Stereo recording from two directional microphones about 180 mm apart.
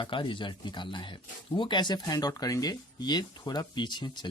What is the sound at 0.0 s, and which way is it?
Speech, 30° left (ahead or behind).